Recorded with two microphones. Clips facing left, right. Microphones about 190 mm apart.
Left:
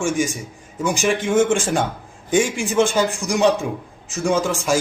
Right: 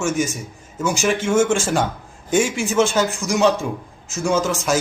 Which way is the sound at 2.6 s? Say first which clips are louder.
Even; 15° left (ahead or behind).